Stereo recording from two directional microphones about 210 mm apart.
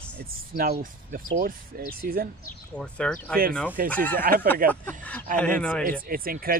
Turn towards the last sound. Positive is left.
turn(degrees=-45)  # may be behind; listen again after turning